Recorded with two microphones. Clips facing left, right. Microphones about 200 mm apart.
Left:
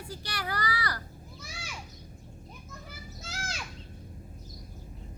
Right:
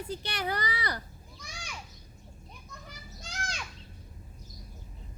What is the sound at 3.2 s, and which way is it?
Children playing, 5° left (ahead or behind).